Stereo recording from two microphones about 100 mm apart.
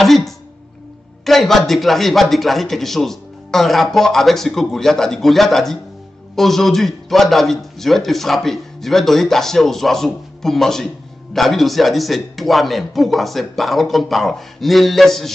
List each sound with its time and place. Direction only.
0.0 s a man's voice: centre (ahead or behind)
1.2 s a sound: centre (ahead or behind)
1.7 s a man's voice: centre (ahead or behind)